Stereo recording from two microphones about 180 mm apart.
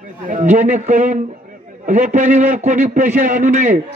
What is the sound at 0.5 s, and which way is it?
A man's voice, 40° right (ahead or behind).